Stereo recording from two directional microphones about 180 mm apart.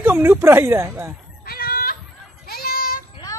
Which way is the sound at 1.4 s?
55° left (ahead or behind).